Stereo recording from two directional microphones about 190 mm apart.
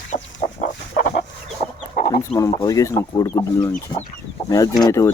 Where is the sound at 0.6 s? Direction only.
50° left (ahead or behind).